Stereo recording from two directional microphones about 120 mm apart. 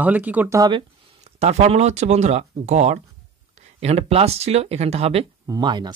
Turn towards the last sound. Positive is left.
turn(degrees=-40)  # may be behind; listen again after turning